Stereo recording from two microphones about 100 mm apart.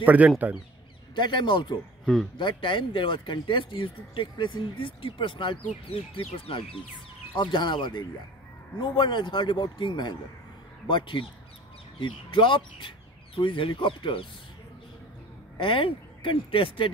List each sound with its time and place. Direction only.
0.0 s speech: 15° right (ahead or behind)
1.1 s speech: 50° left (ahead or behind)
7.3 s speech: 50° left (ahead or behind)
15.5 s speech: 60° left (ahead or behind)